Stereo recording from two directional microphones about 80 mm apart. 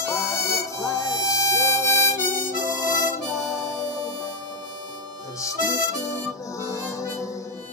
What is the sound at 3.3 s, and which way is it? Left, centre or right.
Harmonica, left.